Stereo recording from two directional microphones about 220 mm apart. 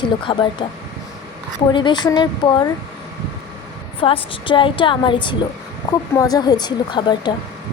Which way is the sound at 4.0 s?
25° left (ahead or behind).